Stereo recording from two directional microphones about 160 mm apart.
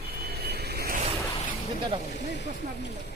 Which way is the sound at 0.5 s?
85° right.